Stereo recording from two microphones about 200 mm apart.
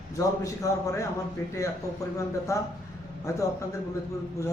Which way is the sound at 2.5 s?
15° left (ahead or behind).